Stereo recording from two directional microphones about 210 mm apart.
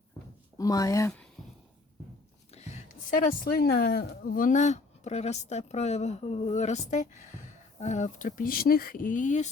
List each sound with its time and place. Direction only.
0.6 s speech: 15° left (ahead or behind)
2.5 s speech: 30° left (ahead or behind)